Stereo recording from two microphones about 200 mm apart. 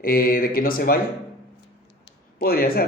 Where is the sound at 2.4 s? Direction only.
50° left (ahead or behind).